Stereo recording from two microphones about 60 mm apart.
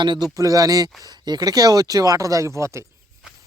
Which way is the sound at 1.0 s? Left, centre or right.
Right.